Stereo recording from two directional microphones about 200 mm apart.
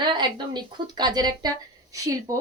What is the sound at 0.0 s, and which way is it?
Speech, 20° right (ahead or behind).